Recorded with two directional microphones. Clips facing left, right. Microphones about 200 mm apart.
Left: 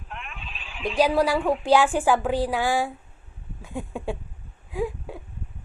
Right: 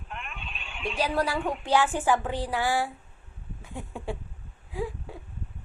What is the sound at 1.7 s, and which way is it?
Speech, 10° left (ahead or behind).